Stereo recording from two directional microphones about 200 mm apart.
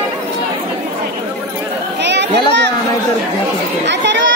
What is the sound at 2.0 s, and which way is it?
Chatter, 60° right (ahead or behind).